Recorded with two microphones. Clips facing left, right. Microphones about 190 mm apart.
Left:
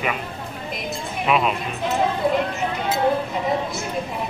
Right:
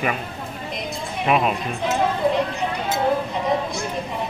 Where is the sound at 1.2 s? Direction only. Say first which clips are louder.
Right 1 dB; 45° right (ahead or behind).